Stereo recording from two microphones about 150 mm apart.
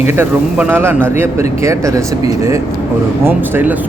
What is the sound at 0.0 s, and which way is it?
Speech, 15° right (ahead or behind).